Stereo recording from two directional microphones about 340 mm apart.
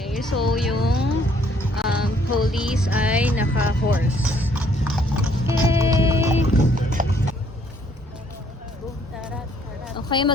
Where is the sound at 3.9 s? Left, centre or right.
Centre.